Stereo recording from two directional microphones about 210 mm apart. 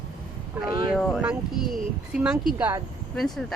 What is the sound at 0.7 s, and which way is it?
Speech, 20° right (ahead or behind).